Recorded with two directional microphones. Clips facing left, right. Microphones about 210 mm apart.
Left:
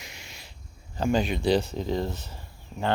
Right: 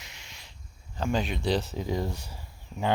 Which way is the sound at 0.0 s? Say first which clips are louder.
Left 5 dB; 10° left (ahead or behind).